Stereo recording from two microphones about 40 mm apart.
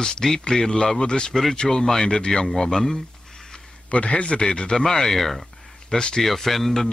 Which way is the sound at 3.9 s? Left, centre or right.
Left.